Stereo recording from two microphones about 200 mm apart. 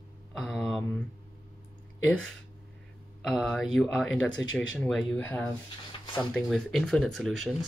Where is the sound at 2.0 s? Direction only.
5° left (ahead or behind).